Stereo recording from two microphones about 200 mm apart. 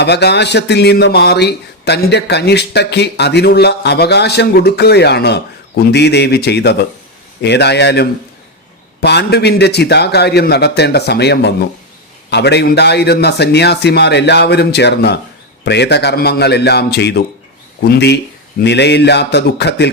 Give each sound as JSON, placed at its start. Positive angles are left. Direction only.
{"t": 0.0, "sound": "speech", "side_deg": 55}